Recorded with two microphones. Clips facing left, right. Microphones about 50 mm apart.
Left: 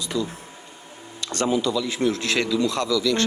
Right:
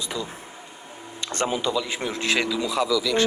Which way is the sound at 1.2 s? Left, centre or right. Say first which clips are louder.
Left 3 dB; right.